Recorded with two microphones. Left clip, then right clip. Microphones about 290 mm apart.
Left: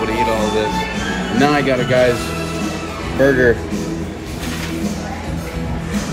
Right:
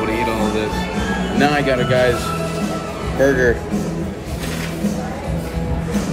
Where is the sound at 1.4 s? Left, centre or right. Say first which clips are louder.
Left 1 dB; centre.